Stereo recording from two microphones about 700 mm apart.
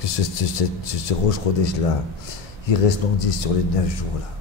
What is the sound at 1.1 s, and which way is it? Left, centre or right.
Speech, left.